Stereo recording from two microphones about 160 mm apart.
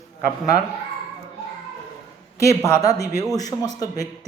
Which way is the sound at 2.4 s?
20° left (ahead or behind).